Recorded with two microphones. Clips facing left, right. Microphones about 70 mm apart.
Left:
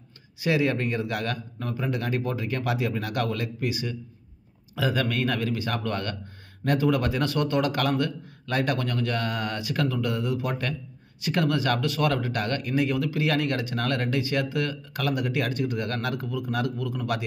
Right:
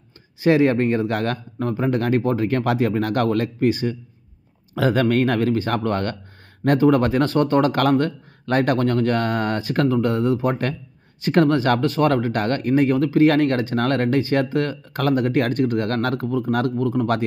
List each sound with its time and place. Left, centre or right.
0.4 s speech: right